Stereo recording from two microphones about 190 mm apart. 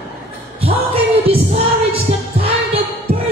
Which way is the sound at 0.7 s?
30° right (ahead or behind).